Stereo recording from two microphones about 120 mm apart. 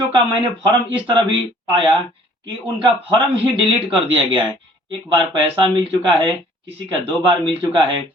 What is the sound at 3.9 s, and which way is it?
A man's voice, 45° right (ahead or behind).